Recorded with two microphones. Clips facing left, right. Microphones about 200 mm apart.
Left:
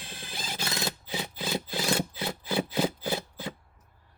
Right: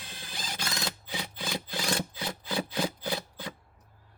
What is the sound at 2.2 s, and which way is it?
Wood, 25° left (ahead or behind).